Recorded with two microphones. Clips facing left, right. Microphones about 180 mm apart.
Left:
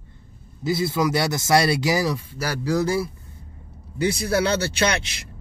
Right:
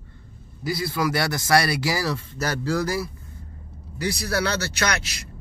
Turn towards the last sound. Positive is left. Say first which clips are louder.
# left 4 dB
turn(degrees=30)  # may be behind; listen again after turning